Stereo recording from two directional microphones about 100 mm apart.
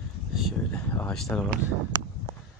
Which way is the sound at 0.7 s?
10° left (ahead or behind).